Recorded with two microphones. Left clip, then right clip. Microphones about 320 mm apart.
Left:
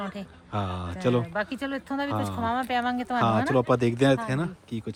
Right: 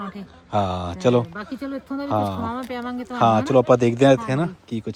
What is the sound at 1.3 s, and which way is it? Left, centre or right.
Speech, left.